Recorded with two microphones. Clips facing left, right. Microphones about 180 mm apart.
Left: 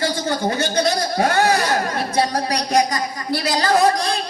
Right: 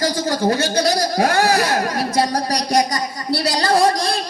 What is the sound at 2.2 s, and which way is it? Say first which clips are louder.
A man's voice: even; 40° right (ahead or behind).